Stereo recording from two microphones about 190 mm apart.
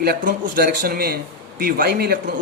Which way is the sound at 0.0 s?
55° right (ahead or behind).